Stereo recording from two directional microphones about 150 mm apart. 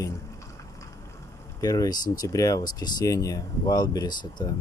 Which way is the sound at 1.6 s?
25° left (ahead or behind).